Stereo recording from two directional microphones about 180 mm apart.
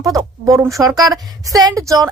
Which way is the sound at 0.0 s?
20° right (ahead or behind).